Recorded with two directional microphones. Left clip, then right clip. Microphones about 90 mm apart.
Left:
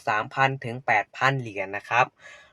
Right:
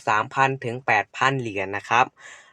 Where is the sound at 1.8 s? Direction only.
70° right (ahead or behind).